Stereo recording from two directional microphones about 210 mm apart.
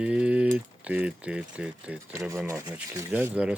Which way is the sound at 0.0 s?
5° right (ahead or behind).